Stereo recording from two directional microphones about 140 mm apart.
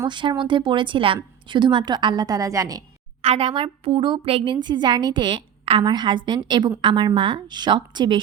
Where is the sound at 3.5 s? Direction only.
40° right (ahead or behind).